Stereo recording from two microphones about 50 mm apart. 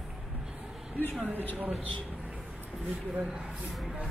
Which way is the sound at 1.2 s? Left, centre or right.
Right.